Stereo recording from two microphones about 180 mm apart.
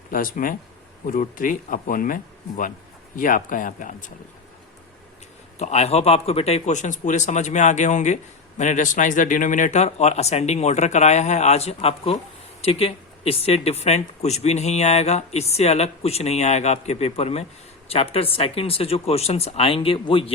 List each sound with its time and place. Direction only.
0.1 s speech: 50° left (ahead or behind)
5.5 s speech: 35° left (ahead or behind)